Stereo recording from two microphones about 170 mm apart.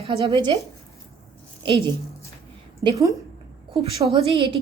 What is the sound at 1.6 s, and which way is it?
Speech, 30° right (ahead or behind).